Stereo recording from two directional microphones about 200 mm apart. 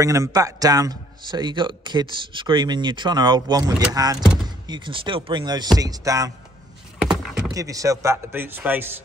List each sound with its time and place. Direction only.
0.0 s a man's voice: 15° right (ahead or behind)
7.0 s a sound: 5° right (ahead or behind)
7.5 s a man's voice: 15° right (ahead or behind)